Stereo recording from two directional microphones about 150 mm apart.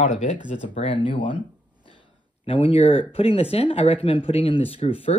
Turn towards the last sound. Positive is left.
turn(degrees=40)  # may be behind; listen again after turning